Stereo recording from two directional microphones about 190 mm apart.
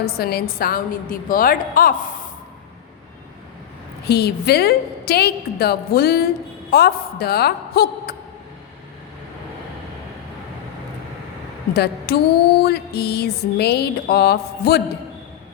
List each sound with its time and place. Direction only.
0.2 s a woman's voice: 55° left (ahead or behind)
4.0 s a woman's voice: 60° left (ahead or behind)
11.7 s a woman's voice: 60° left (ahead or behind)